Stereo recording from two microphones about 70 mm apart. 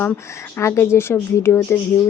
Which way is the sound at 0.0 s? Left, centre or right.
Left.